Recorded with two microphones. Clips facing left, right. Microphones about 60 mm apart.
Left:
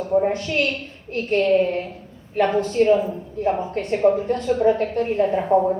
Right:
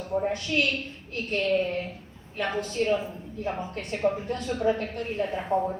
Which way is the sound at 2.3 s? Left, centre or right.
Left.